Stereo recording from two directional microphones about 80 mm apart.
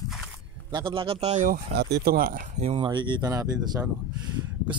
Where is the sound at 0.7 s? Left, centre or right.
Right.